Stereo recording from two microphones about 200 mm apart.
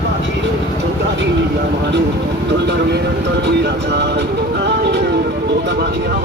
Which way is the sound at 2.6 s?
60° right (ahead or behind).